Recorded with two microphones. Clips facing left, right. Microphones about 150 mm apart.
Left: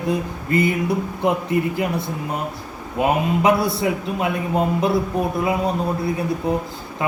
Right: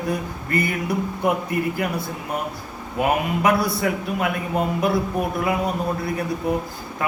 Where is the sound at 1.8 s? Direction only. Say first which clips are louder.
Left 2 dB; 25° left (ahead or behind).